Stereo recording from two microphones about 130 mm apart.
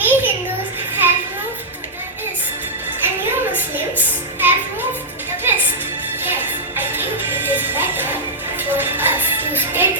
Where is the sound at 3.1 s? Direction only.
15° right (ahead or behind).